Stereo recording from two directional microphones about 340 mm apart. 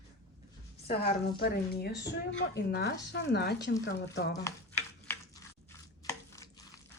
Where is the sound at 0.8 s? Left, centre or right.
Left.